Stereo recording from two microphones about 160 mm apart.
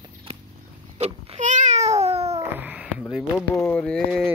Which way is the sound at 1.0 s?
45° right (ahead or behind).